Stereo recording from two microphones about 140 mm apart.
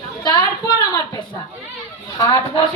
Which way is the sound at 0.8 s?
25° left (ahead or behind).